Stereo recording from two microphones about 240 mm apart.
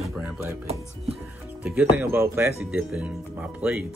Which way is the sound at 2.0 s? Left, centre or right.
Centre.